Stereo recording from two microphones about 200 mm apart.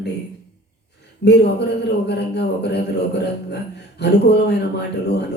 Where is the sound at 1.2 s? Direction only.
55° left (ahead or behind).